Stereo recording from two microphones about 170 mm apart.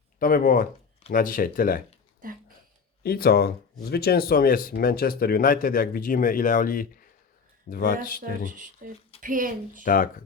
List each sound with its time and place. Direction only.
0.2 s speech: 55° left (ahead or behind)
2.2 s a sound: 55° right (ahead or behind)
3.0 s speech: 65° left (ahead or behind)
8.2 s speech: 50° right (ahead or behind)
9.8 s speech: 55° left (ahead or behind)